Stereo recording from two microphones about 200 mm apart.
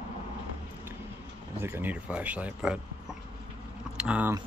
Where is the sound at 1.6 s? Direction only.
10° right (ahead or behind).